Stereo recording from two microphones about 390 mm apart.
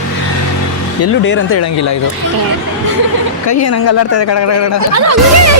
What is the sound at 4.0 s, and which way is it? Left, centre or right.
Speech, left.